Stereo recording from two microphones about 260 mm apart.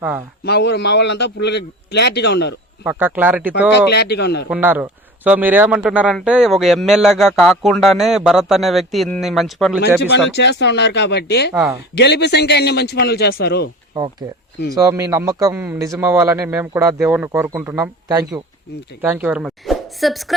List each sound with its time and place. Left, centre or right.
0.4 s a man's voice: left
2.8 s a man's voice: centre
3.8 s a man's voice: left
4.4 s a man's voice: centre
9.8 s a man's voice: left
11.5 s a man's voice: centre
11.9 s a man's voice: left
14.8 s a man's voice: centre